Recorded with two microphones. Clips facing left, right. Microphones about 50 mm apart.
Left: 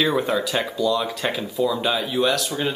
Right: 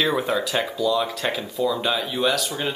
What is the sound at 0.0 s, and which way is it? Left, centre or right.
Speech, centre.